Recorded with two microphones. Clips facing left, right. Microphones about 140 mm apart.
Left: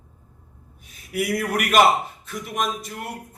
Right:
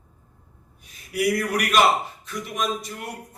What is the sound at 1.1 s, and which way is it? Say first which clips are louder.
A man's voice: right 1 dB; 50° left (ahead or behind).